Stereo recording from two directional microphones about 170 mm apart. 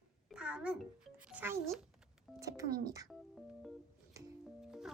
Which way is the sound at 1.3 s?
10° right (ahead or behind).